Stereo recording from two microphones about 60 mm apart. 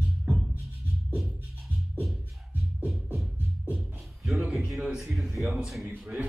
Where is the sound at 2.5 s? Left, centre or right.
Right.